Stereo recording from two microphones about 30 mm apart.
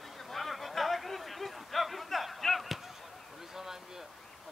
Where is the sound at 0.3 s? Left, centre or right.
Centre.